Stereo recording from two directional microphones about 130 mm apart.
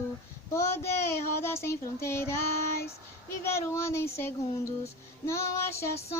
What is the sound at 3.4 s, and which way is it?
Child singing, 20° left (ahead or behind).